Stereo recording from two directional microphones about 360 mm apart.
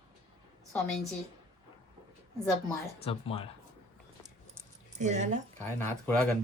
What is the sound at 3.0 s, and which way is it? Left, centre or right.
Speech, centre.